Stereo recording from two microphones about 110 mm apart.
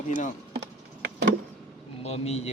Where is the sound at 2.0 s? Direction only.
75° left (ahead or behind).